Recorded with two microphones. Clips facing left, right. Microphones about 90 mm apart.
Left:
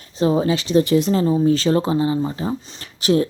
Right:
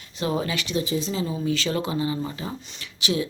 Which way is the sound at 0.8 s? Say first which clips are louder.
Left 10 dB; 65° left (ahead or behind).